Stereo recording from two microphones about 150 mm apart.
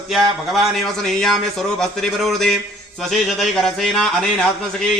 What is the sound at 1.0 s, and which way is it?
Speech, 5° left (ahead or behind).